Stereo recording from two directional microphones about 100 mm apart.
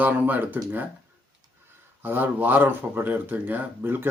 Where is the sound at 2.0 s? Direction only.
15° right (ahead or behind).